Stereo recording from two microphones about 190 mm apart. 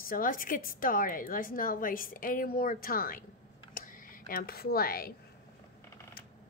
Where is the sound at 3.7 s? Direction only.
45° left (ahead or behind).